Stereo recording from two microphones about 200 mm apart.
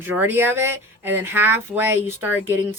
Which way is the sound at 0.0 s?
10° right (ahead or behind).